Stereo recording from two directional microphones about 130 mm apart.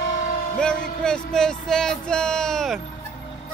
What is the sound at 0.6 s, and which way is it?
Music, 5° left (ahead or behind).